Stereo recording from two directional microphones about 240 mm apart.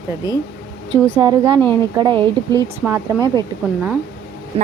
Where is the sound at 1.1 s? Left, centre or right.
Centre.